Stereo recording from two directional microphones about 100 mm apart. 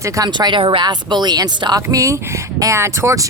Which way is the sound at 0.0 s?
35° right (ahead or behind).